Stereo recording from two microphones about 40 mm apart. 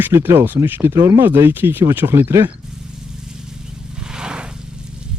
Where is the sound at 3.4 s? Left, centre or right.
Centre.